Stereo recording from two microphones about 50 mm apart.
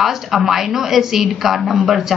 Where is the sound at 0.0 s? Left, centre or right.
Centre.